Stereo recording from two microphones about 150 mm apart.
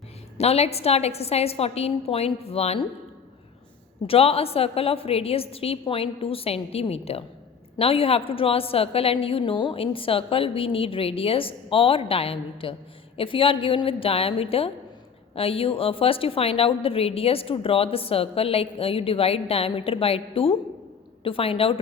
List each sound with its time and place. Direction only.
0.3 s a woman's voice: 45° left (ahead or behind)
4.0 s a woman's voice: 40° left (ahead or behind)